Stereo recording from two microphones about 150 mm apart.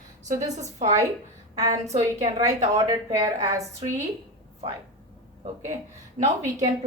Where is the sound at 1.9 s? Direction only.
50° right (ahead or behind).